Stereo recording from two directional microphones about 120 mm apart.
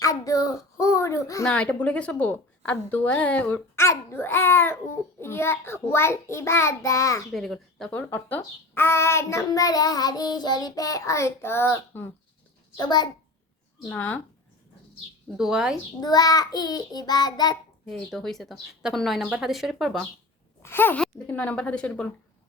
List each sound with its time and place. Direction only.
0.0 s a child's voice: 30° left (ahead or behind)
1.5 s a woman's voice: 10° left (ahead or behind); by 7.3 s 25° left (ahead or behind)
7.3 s a child's voice: centre (ahead or behind); by 12.0 s 20° left (ahead or behind)
12.7 s child singing: 35° left (ahead or behind)
13.8 s a woman's voice: 15° left (ahead or behind)
15.4 s speech: 5° right (ahead or behind)
16.0 s child singing: 35° left (ahead or behind)
17.8 s speech: 5° left (ahead or behind)
20.6 s a woman's voice: 20° left (ahead or behind)